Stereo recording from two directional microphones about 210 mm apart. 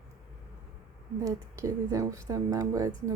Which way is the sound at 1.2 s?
15° right (ahead or behind).